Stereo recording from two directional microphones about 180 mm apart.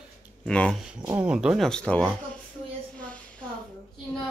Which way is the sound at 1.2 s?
5° right (ahead or behind).